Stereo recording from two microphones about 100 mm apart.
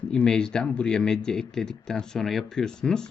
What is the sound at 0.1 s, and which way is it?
Speech, 10° left (ahead or behind).